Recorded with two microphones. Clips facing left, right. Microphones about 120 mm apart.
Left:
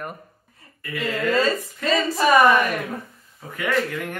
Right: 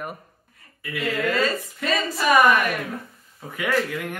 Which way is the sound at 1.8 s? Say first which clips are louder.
Left 4 dB; 30° left (ahead or behind).